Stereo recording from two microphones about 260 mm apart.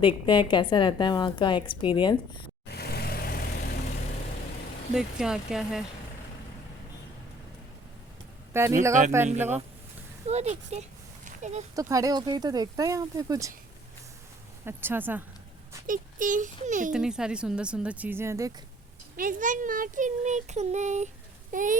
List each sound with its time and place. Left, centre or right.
0.0 s a woman's voice: centre
2.6 s vehicle: left
4.9 s speech: centre
8.5 s speech: centre
8.9 s speech: right
10.2 s speech: right
11.3 s a sound: right
11.7 s speech: centre
14.6 s speech: centre
15.9 s speech: right
16.9 s speech: centre
19.1 s speech: right